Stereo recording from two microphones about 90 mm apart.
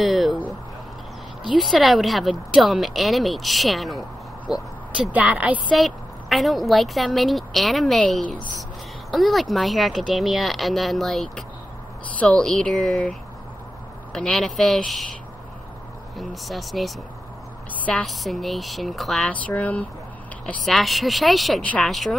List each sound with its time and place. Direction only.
0.0 s a sound: centre (ahead or behind)
1.6 s speech: centre (ahead or behind)
4.5 s vehicle: 5° right (ahead or behind)
5.1 s a woman's voice: 15° right (ahead or behind)
5.8 s speech: centre (ahead or behind)
9.1 s speech: centre (ahead or behind)
12.2 s speech: 15° left (ahead or behind)
14.1 s speech: 10° left (ahead or behind)
16.2 s speech: centre (ahead or behind)
18.0 s speech: centre (ahead or behind)
19.4 s speech: 15° left (ahead or behind)
20.6 s speech: centre (ahead or behind)
21.5 s speech: 15° left (ahead or behind)
21.8 s speech: centre (ahead or behind)